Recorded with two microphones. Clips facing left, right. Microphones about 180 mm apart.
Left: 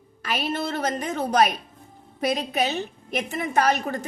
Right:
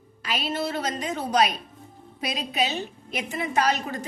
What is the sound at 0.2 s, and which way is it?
A woman's voice, 50° left (ahead or behind).